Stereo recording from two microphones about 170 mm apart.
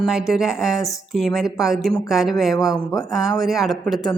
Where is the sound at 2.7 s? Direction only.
20° left (ahead or behind).